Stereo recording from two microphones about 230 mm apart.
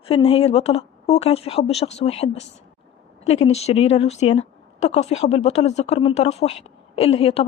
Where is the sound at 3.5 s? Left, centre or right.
Left.